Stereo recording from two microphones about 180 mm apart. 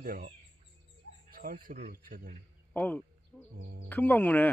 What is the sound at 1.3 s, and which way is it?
Speech, 50° right (ahead or behind).